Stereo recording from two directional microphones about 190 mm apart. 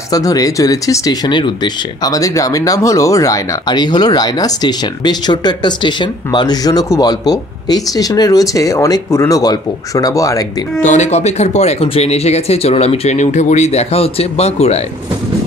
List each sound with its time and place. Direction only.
0.1 s speech: 20° left (ahead or behind)
10.8 s speech: 40° left (ahead or behind)